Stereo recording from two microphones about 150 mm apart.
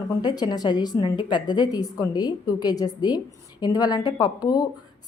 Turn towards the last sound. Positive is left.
turn(degrees=25)  # may be behind; listen again after turning